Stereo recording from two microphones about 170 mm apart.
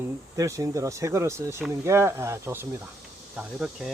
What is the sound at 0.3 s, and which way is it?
Speech, 20° right (ahead or behind).